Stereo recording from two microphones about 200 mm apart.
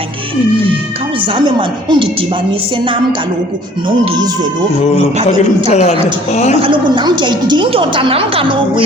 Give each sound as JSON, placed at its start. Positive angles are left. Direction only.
{"t": 1.5, "sound": "speech", "side_deg": -25}
{"t": 5.6, "sound": "a woman's voice", "side_deg": 35}
{"t": 6.6, "sound": "speech", "side_deg": -25}